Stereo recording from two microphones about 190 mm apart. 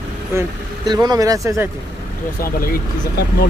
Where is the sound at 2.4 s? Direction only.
50° left (ahead or behind).